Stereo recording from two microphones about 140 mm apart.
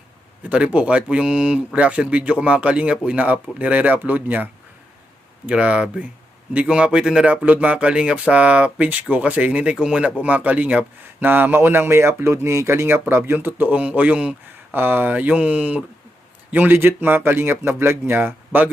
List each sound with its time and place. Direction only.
0.5 s speech: 10° right (ahead or behind)
5.5 s speech: 10° right (ahead or behind)